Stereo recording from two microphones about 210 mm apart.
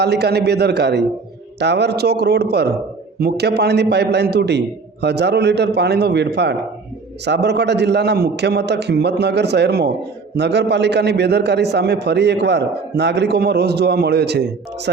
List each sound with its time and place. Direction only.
0.0 s a man's voice: 50° right (ahead or behind)